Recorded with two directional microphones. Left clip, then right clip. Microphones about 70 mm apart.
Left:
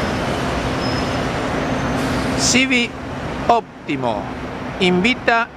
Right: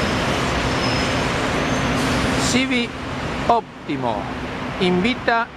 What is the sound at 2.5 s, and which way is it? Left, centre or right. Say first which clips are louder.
Speech: left 4 dB; left.